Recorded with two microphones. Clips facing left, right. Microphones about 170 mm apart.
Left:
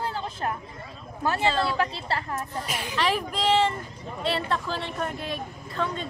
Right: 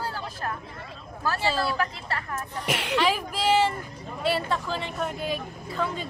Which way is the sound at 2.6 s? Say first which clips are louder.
Right 5 dB; 70° right (ahead or behind).